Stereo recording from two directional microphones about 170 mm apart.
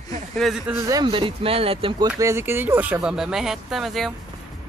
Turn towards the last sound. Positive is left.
turn(degrees=0)  # may be behind; listen again after turning